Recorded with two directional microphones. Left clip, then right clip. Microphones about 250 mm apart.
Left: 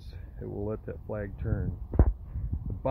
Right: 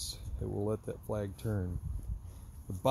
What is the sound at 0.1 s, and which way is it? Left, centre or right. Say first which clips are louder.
Speech: even; centre.